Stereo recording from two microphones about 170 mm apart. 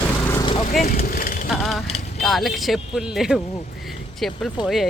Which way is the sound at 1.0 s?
55° left (ahead or behind).